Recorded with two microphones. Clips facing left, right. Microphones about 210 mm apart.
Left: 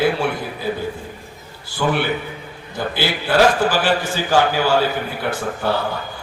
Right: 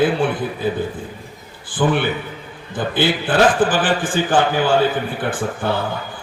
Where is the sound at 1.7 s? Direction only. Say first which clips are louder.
Right 2 dB; 50° right (ahead or behind).